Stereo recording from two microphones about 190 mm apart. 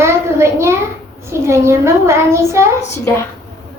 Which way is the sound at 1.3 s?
15° right (ahead or behind).